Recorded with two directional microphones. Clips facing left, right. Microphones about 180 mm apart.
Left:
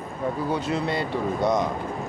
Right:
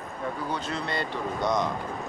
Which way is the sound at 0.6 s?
5° left (ahead or behind).